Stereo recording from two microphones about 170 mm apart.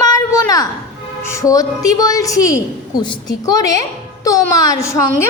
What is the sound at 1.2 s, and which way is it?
A woman's voice, 15° left (ahead or behind).